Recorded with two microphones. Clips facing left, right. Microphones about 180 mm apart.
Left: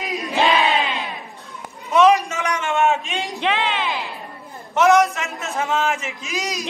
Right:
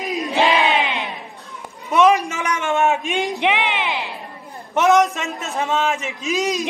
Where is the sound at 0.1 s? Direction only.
20° right (ahead or behind).